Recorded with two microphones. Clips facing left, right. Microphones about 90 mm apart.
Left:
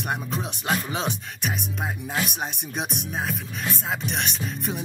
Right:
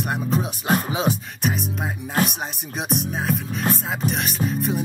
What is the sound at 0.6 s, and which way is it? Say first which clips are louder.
Music: right 4 dB; 45° right (ahead or behind).